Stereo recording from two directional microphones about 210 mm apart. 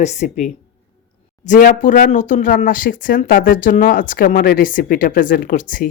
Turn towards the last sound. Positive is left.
turn(degrees=40)  # may be behind; listen again after turning